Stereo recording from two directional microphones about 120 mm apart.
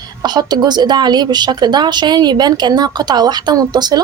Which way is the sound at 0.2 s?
35° right (ahead or behind).